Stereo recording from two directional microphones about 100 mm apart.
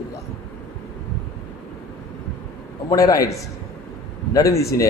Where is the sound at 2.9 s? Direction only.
35° left (ahead or behind).